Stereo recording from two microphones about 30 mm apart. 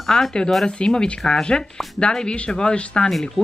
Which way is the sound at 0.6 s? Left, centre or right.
Left.